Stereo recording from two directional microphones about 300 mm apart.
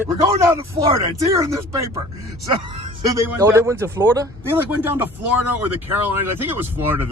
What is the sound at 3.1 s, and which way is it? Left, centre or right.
Speech, centre.